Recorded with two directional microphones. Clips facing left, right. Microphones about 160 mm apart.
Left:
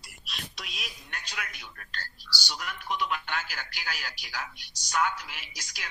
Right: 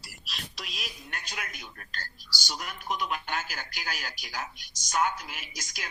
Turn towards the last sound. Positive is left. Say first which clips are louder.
# right 2 dB
turn(degrees=-45)  # may be behind; listen again after turning